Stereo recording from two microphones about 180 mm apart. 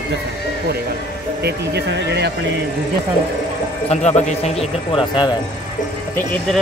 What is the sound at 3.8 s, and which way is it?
Speech, 35° left (ahead or behind).